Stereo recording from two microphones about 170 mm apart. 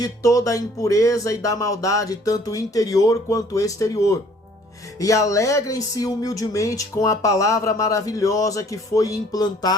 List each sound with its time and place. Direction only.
0.0 s speech: 20° left (ahead or behind)